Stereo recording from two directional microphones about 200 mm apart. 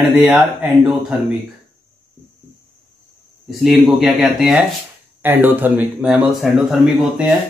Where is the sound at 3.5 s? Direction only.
Centre (ahead or behind).